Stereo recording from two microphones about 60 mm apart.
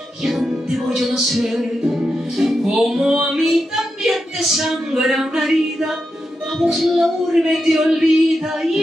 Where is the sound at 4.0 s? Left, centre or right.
Centre.